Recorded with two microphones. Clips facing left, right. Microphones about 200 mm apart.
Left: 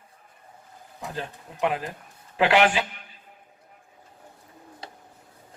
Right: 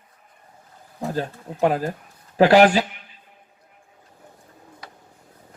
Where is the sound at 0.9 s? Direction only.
40° right (ahead or behind).